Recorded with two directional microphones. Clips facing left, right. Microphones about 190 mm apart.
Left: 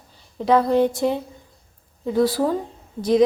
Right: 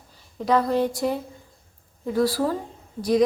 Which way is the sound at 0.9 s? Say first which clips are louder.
Left 3 dB; 25° left (ahead or behind).